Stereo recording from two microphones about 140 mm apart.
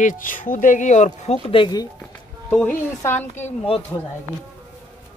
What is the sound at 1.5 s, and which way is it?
Speech, 35° left (ahead or behind).